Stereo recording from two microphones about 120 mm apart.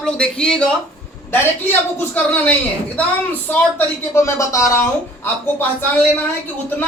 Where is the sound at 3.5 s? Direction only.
15° left (ahead or behind).